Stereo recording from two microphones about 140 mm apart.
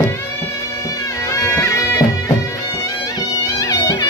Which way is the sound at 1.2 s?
20° left (ahead or behind).